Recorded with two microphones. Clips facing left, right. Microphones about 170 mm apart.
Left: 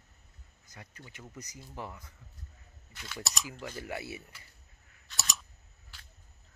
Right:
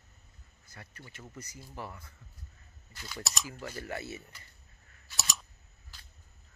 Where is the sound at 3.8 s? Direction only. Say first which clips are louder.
Even; 10° left (ahead or behind).